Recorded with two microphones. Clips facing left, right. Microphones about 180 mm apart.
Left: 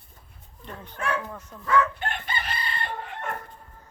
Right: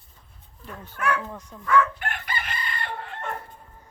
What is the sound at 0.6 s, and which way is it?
Speech, 5° right (ahead or behind).